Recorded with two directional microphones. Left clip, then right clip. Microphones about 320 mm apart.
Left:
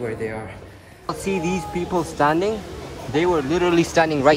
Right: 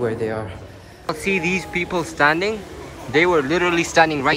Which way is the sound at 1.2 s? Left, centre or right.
Left.